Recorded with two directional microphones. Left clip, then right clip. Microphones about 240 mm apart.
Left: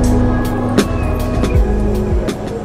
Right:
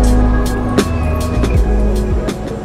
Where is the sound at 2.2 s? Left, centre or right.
Centre.